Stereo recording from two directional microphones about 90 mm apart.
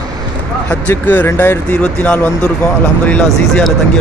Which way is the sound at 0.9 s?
20° left (ahead or behind).